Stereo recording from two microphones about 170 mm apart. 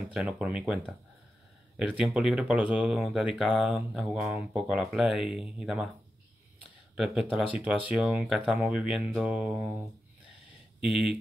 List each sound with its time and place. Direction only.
0.1 s speech: 5° right (ahead or behind)
7.0 s speech: 5° right (ahead or behind)
10.8 s speech: 5° right (ahead or behind)